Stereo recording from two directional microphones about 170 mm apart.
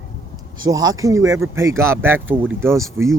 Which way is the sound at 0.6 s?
20° right (ahead or behind).